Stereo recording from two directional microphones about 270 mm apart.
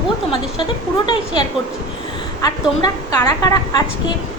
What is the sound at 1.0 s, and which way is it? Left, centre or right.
A woman's voice, centre.